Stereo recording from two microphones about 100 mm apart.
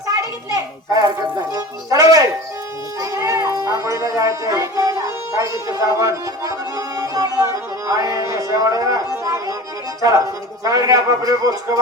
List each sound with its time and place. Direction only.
0.2 s children playing: 40° right (ahead or behind)
1.5 s music: 35° right (ahead or behind)
3.0 s a sound: 30° right (ahead or behind)
3.4 s a sound: 40° left (ahead or behind)
3.8 s speech: 30° right (ahead or behind)
6.0 s music: 35° right (ahead or behind)
10.0 s a man's voice: 35° right (ahead or behind)